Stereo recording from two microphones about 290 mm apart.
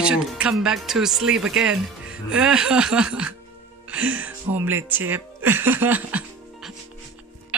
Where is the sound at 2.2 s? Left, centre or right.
Centre.